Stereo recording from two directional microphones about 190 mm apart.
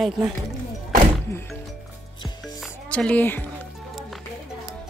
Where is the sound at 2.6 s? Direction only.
5° left (ahead or behind).